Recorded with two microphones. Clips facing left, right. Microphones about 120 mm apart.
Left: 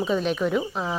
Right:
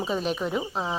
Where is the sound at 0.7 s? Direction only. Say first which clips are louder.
Left 1 dB; 25° right (ahead or behind).